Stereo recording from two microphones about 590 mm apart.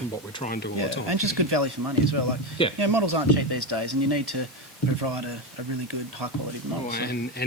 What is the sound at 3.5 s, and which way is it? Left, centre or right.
Speech, right.